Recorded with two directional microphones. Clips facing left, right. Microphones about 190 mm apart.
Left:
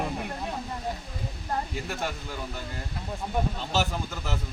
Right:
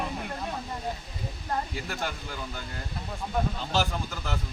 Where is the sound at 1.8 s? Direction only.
Centre (ahead or behind).